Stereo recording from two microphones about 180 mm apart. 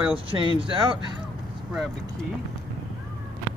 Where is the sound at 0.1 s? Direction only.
30° right (ahead or behind).